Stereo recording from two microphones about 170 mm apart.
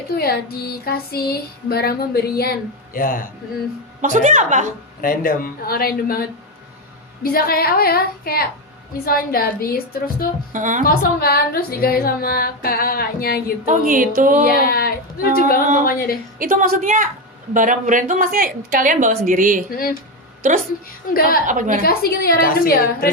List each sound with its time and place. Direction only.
0.2 s female singing: 65° left (ahead or behind)
2.9 s female singing: 55° left (ahead or behind)
4.0 s a woman's voice: 50° right (ahead or behind)
4.9 s female singing: 55° left (ahead or behind)
10.5 s a woman's voice: 50° right (ahead or behind)
10.8 s female singing: 60° left (ahead or behind)
13.7 s a woman's voice: 50° right (ahead or behind)
14.4 s female singing: 60° left (ahead or behind)
16.4 s a woman's voice: 55° right (ahead or behind)
21.1 s female singing: 60° left (ahead or behind)
21.4 s a woman's voice: 50° right (ahead or behind)
21.8 s female singing: 65° left (ahead or behind)